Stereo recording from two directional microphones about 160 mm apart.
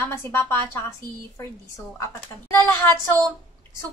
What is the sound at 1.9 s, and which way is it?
Speech, 15° left (ahead or behind).